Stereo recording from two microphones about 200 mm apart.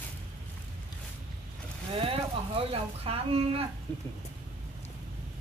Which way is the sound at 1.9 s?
25° right (ahead or behind).